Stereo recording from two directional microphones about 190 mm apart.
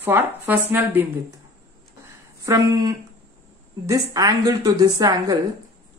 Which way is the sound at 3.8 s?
20° right (ahead or behind).